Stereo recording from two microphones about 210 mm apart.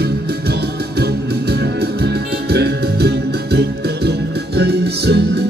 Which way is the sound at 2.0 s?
50° right (ahead or behind).